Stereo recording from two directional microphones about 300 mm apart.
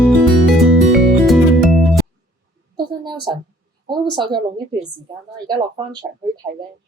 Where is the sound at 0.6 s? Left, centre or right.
Centre.